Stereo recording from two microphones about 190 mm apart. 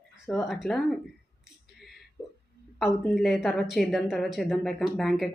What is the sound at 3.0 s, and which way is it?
A woman's voice, centre (ahead or behind).